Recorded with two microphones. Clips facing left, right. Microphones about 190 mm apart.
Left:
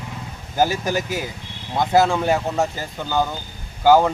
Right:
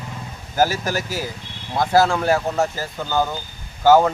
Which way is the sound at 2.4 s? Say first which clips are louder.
Right 1 dB; centre (ahead or behind).